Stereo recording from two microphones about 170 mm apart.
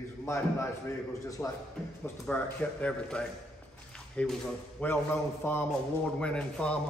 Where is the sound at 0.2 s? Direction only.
15° left (ahead or behind).